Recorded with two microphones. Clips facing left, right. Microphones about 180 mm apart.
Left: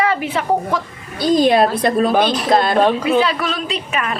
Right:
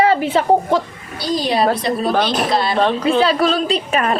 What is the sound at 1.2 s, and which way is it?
A woman's voice, 50° left (ahead or behind).